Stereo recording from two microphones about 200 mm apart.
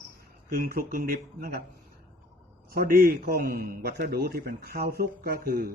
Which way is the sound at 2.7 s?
45° right (ahead or behind).